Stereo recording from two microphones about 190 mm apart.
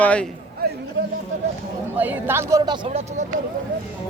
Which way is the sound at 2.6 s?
25° right (ahead or behind).